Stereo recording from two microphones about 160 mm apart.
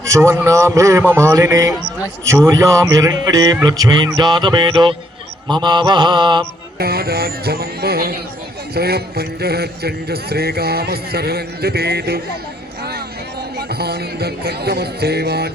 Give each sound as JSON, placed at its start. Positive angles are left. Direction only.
{"t": 0.0, "sound": "a man's voice", "side_deg": -20}
{"t": 6.7, "sound": "speech", "side_deg": -75}
{"t": 13.6, "sound": "speech", "side_deg": -80}